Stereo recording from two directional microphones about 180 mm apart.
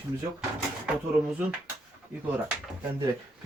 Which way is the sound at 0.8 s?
5° right (ahead or behind).